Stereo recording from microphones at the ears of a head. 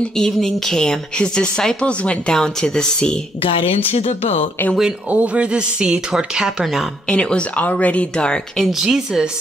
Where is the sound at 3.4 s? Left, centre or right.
Left.